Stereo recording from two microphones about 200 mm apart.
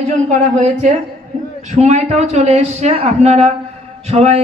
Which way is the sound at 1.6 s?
35° right (ahead or behind).